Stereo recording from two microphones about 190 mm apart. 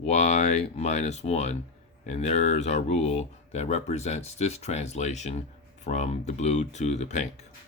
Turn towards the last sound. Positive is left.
turn(degrees=40)  # may be behind; listen again after turning